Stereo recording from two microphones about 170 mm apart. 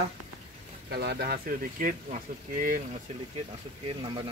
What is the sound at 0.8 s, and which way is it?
Speech, 70° right (ahead or behind).